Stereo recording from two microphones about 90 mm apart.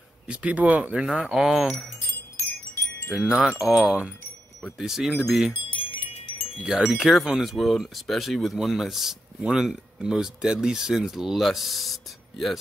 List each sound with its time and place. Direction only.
0.3 s speech: 10° right (ahead or behind)
1.7 s chime: 15° left (ahead or behind)
3.1 s wind chime: 5° right (ahead or behind)
3.3 s speech: 5° right (ahead or behind)
5.7 s wind chime: 70° left (ahead or behind)
6.6 s speech: 5° right (ahead or behind)